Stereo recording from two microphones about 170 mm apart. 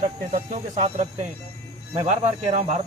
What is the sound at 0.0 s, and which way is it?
Speech, 40° right (ahead or behind).